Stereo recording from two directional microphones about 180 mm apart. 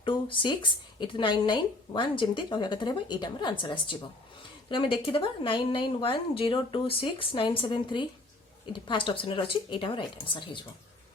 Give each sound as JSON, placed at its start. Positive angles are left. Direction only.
{"t": 0.0, "sound": "speech", "side_deg": 25}